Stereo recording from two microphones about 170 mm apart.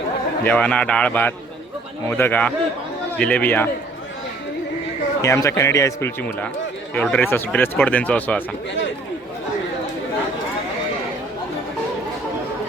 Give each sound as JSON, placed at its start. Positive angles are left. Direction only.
{"t": 0.4, "sound": "speech", "side_deg": 10}
{"t": 5.2, "sound": "speech", "side_deg": 15}